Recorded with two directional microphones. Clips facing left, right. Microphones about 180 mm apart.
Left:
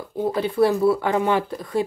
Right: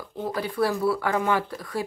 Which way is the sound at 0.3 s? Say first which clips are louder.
Left 6 dB; 25° left (ahead or behind).